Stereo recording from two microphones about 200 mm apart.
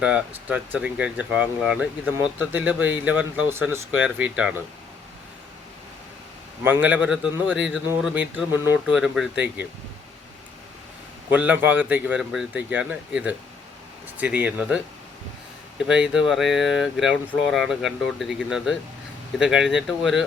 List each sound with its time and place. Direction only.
0.0 s speech: 5° right (ahead or behind)
6.7 s speech: 10° right (ahead or behind)
11.3 s speech: 10° right (ahead or behind)
15.9 s speech: 5° right (ahead or behind)